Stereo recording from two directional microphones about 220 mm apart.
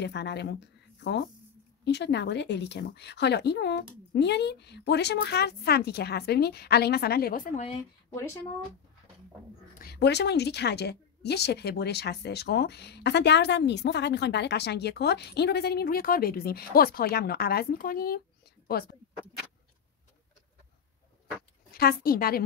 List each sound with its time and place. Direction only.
0.0 s speech: 50° left (ahead or behind)
8.1 s speech: 10° left (ahead or behind)
9.8 s speech: 45° left (ahead or behind)
21.7 s speech: 45° left (ahead or behind)